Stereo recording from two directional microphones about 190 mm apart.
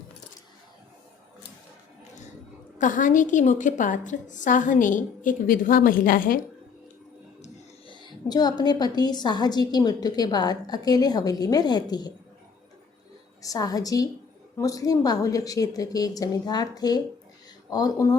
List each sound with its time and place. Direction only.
2.7 s a woman's voice: 40° left (ahead or behind)
7.9 s a woman's voice: 20° left (ahead or behind)
13.4 s a woman's voice: 20° left (ahead or behind)